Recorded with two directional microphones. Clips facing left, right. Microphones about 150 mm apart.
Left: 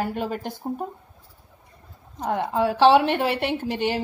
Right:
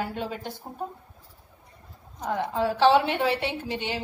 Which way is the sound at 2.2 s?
55° left (ahead or behind).